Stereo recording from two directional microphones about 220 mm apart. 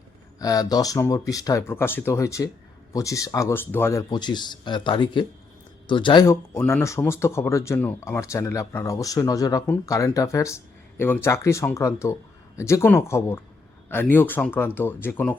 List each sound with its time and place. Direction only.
0.3 s speech: 15° left (ahead or behind)